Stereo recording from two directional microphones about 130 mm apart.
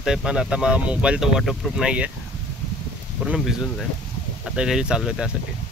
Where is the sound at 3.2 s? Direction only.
5° right (ahead or behind).